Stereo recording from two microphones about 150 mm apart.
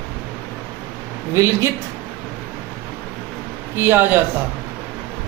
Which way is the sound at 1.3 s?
20° right (ahead or behind).